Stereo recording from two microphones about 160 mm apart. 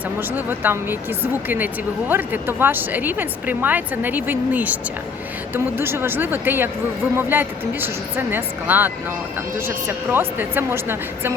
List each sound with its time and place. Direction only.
0.2 s a woman's voice: 10° right (ahead or behind)